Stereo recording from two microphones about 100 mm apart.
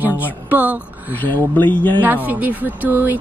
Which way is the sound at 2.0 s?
15° right (ahead or behind).